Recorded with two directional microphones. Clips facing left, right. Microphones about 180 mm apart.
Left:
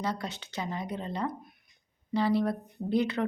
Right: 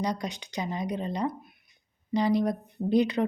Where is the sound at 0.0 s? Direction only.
15° right (ahead or behind).